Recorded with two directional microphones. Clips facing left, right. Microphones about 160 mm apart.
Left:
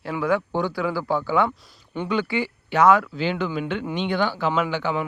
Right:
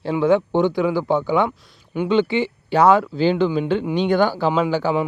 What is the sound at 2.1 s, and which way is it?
Speech, 25° right (ahead or behind).